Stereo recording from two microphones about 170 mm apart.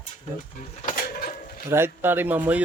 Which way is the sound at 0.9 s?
50° left (ahead or behind).